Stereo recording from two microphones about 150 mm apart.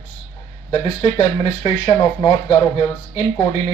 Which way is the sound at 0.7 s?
30° left (ahead or behind).